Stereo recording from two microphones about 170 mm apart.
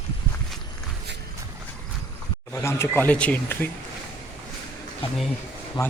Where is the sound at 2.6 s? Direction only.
15° left (ahead or behind).